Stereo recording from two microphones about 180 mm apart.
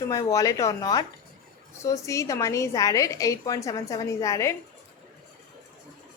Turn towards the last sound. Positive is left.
turn(degrees=15)  # may be behind; listen again after turning